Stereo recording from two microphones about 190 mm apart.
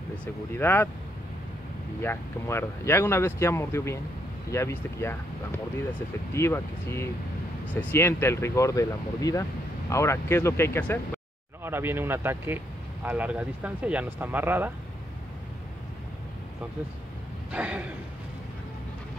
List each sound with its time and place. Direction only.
0.2 s speech: 10° left (ahead or behind)
2.0 s speech: 10° left (ahead or behind)
6.3 s speech: 15° left (ahead or behind)
11.6 s speech: 10° right (ahead or behind)
17.5 s speech: 5° right (ahead or behind)